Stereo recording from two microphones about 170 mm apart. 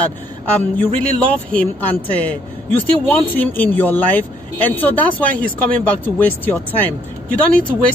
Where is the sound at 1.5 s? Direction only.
10° left (ahead or behind).